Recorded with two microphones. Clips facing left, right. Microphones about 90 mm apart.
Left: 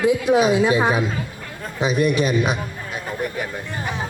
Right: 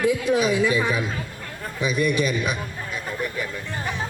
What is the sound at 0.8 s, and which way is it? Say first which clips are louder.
Speech: left 4 dB; 60° left (ahead or behind).